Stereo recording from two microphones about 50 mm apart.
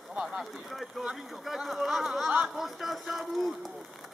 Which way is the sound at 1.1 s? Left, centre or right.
Centre.